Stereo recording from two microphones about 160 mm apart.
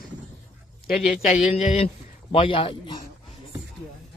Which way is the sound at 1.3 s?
45° left (ahead or behind).